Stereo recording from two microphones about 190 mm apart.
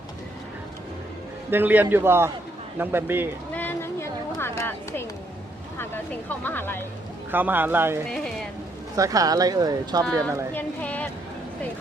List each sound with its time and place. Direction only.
1.5 s a man's voice: 10° right (ahead or behind)
3.5 s a sound: 10° left (ahead or behind)
5.7 s speech: 10° left (ahead or behind)
7.3 s a man's voice: 10° right (ahead or behind)
8.1 s rain on surface: centre (ahead or behind)
9.0 s speech: 20° right (ahead or behind)
10.5 s speech: 10° left (ahead or behind)